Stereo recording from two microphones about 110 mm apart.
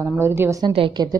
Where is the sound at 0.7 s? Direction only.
45° right (ahead or behind).